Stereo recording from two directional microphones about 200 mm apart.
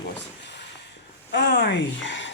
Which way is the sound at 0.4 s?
60° left (ahead or behind).